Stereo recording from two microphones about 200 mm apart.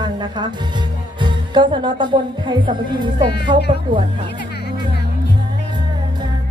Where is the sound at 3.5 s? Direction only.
20° right (ahead or behind).